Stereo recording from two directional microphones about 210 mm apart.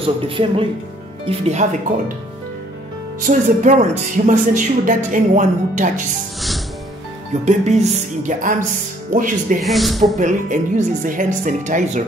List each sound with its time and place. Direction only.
0.0 s speech: 25° right (ahead or behind)
3.3 s speech: 35° right (ahead or behind)
7.4 s speech: 35° right (ahead or behind)
9.6 s speech: centre (ahead or behind)
10.1 s speech: 35° right (ahead or behind)